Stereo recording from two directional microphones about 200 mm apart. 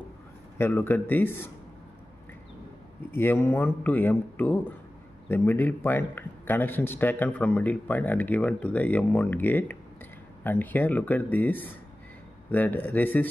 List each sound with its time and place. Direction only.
0.6 s speech: 10° left (ahead or behind)
3.1 s speech: 10° left (ahead or behind)